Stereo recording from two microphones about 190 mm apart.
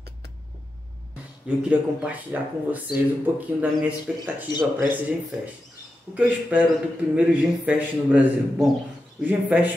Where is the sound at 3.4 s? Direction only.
10° right (ahead or behind).